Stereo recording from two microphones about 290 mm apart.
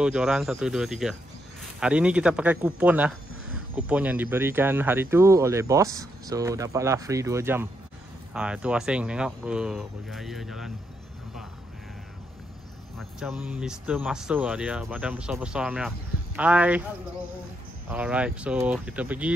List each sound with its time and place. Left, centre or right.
0.0 s speech: centre
12.9 s speech: centre
17.8 s speech: centre